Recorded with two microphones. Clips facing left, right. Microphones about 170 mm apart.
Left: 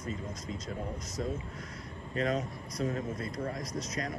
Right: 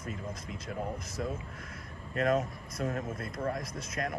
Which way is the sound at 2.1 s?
55° right (ahead or behind).